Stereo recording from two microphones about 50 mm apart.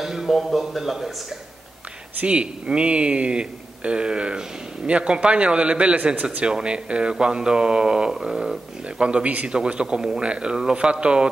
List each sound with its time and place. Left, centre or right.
0.0 s speech: centre
2.2 s speech: right
9.5 s speech: centre